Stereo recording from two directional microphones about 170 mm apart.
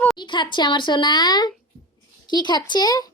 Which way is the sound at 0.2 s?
25° left (ahead or behind).